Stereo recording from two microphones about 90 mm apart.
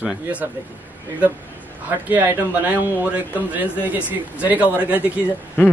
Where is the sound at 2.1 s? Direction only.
20° right (ahead or behind).